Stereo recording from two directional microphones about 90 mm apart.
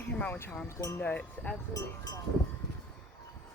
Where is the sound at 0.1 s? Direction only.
15° left (ahead or behind).